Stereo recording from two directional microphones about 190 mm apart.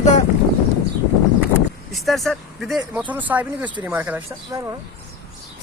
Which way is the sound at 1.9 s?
Centre (ahead or behind).